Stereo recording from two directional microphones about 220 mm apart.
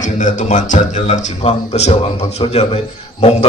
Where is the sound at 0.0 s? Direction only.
35° left (ahead or behind).